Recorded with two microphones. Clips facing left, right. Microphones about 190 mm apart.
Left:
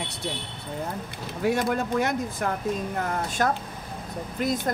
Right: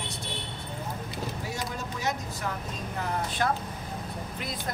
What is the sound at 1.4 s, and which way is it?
Speech, 60° left (ahead or behind).